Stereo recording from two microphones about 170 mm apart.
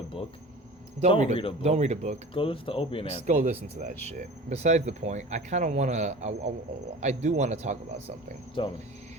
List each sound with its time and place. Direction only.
1.0 s speech: 40° right (ahead or behind)
2.3 s speech: 30° left (ahead or behind)
3.2 s speech: 45° right (ahead or behind)
8.6 s speech: 30° left (ahead or behind)